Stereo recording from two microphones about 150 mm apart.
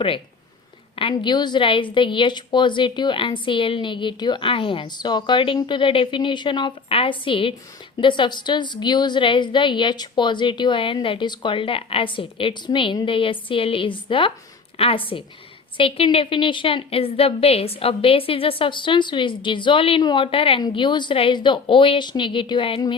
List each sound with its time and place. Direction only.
1.1 s a woman's voice: 30° left (ahead or behind)